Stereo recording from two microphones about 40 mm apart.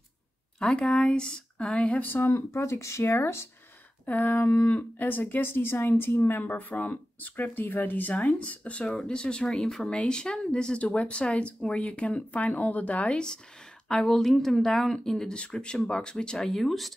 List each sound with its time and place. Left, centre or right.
0.6 s speech: left
3.1 s speech: left
4.0 s speech: left
4.6 s speech: left
6.7 s speech: left
8.1 s speech: left
9.0 s speech: left
13.8 s speech: centre
15.5 s speech: left
16.4 s speech: centre